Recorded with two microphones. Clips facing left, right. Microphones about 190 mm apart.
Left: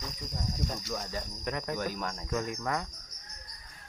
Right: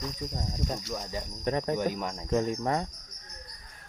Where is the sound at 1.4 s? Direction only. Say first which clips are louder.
Right 7 dB; 30° right (ahead or behind).